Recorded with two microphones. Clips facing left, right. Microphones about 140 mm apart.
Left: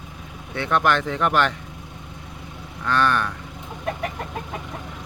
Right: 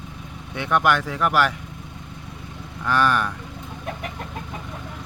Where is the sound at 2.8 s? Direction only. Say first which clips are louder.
Right 1 dB; 10° right (ahead or behind).